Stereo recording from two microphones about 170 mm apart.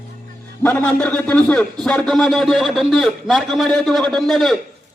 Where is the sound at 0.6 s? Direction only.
10° left (ahead or behind).